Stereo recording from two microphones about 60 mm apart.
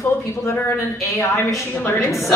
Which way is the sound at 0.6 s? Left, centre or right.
Left.